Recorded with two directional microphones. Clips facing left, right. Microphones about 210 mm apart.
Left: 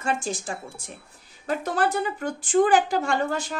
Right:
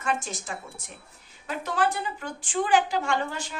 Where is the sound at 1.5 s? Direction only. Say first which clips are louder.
Left 3 dB; 40° left (ahead or behind).